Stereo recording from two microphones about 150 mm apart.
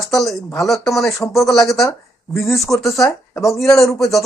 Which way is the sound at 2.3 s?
20° left (ahead or behind).